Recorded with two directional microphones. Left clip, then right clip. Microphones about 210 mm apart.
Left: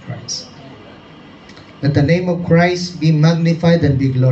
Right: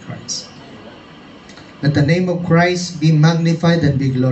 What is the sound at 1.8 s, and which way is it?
A man's voice, 20° left (ahead or behind).